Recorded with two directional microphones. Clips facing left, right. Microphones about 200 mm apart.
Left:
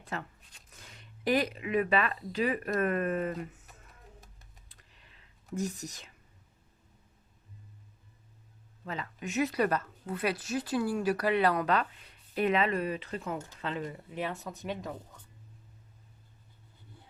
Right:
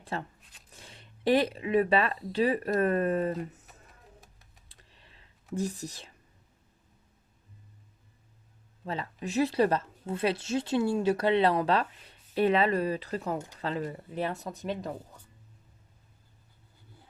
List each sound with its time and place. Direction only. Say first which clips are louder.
0.0 s speech: right 3 dB; 30° right (ahead or behind)
4.7 s computer keyboard: right 2 dB; 30° right (ahead or behind)
5.5 s speech: right 2 dB; 30° right (ahead or behind)
8.8 s speech: right 3 dB; 35° right (ahead or behind)